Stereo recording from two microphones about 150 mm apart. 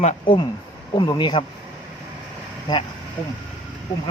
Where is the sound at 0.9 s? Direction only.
30° left (ahead or behind).